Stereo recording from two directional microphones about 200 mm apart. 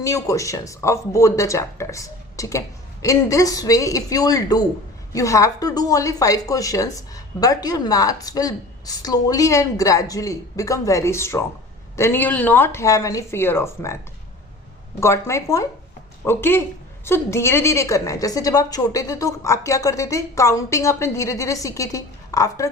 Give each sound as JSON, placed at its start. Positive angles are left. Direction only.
{"t": 0.0, "sound": "a woman's voice", "side_deg": 15}
{"t": 15.0, "sound": "a woman's voice", "side_deg": 15}